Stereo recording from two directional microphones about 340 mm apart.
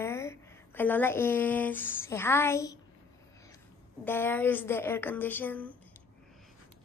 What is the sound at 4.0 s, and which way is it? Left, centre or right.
A woman's voice, centre.